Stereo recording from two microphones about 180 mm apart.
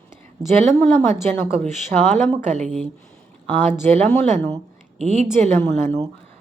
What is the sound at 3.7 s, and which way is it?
A woman's voice, 40° right (ahead or behind).